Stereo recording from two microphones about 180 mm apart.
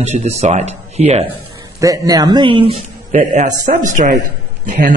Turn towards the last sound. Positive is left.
turn(degrees=-45)  # may be behind; listen again after turning